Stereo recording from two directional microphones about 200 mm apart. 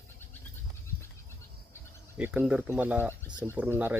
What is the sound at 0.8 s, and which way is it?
Goat, 15° left (ahead or behind).